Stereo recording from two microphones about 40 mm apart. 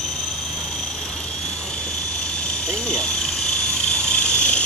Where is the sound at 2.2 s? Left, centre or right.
Left.